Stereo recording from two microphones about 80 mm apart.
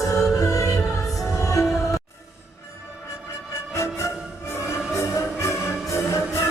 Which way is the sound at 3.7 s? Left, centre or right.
Left.